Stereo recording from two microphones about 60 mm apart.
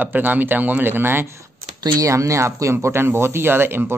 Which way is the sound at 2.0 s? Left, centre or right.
Right.